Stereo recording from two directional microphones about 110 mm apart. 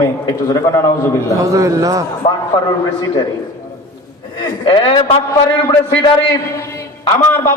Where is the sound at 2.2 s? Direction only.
60° left (ahead or behind).